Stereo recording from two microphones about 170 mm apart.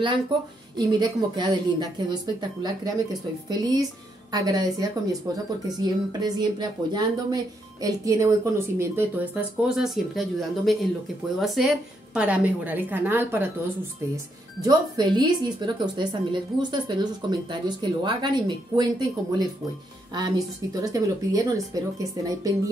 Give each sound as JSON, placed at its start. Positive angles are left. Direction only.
{"t": 0.7, "sound": "a woman's voice", "side_deg": -25}